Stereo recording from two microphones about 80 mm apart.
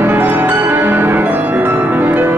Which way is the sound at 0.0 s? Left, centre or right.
Right.